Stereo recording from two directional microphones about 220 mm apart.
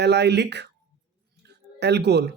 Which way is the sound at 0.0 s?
50° right (ahead or behind).